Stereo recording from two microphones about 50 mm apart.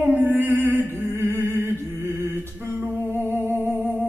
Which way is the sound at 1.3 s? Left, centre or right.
Right.